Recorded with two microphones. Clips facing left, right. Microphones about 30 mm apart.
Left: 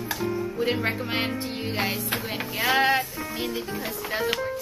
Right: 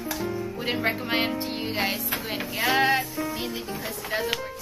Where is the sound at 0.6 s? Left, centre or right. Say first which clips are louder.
Left 1 dB; centre.